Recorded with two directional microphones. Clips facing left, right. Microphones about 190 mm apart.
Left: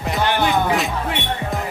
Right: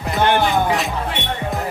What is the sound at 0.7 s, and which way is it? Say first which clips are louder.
Music: even; centre (ahead or behind).